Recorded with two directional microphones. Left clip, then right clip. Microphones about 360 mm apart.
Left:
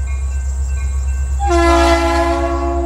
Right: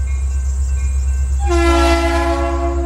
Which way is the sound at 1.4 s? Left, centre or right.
Centre.